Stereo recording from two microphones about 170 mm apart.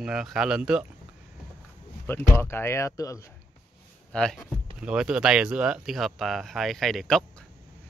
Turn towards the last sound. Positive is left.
turn(degrees=5)  # may be behind; listen again after turning